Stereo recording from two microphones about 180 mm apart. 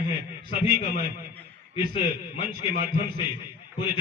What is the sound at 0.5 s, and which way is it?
Speech, 35° left (ahead or behind).